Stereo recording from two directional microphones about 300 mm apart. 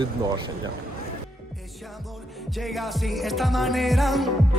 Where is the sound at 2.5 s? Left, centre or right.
Centre.